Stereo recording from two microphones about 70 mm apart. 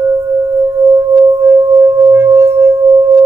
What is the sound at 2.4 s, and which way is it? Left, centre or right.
Singing bowl, right.